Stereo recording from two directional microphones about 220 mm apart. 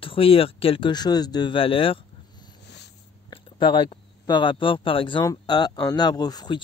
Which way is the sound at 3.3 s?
20° left (ahead or behind).